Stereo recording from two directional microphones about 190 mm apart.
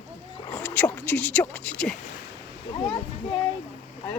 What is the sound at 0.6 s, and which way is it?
Speech, 10° left (ahead or behind).